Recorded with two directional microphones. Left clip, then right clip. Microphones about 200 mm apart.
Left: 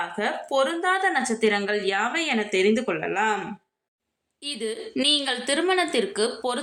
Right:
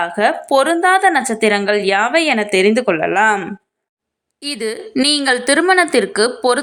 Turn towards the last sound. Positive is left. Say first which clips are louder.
# right 11 dB
turn(degrees=-35)  # may be behind; listen again after turning